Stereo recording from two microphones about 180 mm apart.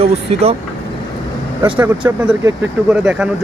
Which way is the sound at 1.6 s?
10° right (ahead or behind).